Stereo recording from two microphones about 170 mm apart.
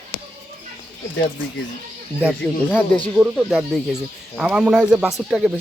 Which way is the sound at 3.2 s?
5° right (ahead or behind).